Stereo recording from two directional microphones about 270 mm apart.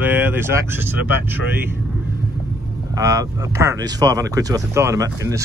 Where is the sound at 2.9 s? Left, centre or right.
Centre.